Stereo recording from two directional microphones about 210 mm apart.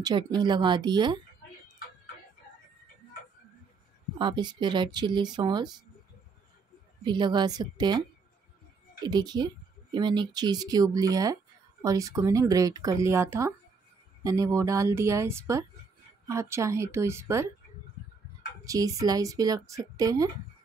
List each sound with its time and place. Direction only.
0.0 s speech: 20° right (ahead or behind)
4.2 s speech: 20° right (ahead or behind)
7.1 s speech: 20° right (ahead or behind)
9.0 s a woman's voice: 20° right (ahead or behind)
18.6 s a woman's voice: 15° right (ahead or behind)